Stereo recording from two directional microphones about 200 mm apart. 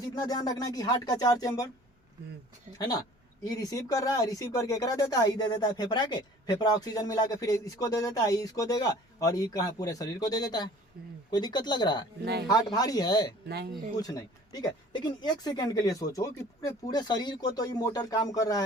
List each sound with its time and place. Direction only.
0.1 s speech: 20° left (ahead or behind)
2.7 s speech: 20° left (ahead or behind)
12.2 s speech: 55° right (ahead or behind)
12.7 s speech: 20° left (ahead or behind)